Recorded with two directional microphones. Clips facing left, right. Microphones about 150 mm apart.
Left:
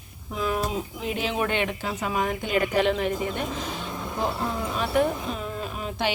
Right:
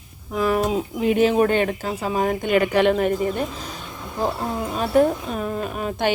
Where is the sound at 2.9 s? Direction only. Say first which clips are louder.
Right 6 dB; 50° right (ahead or behind).